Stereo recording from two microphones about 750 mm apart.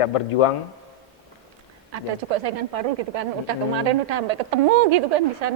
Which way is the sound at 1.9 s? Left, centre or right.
Right.